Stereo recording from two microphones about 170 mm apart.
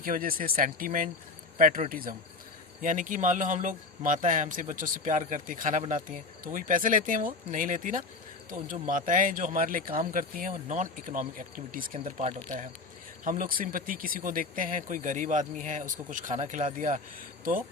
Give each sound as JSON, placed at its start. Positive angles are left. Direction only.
{"t": 0.0, "sound": "speech", "side_deg": -55}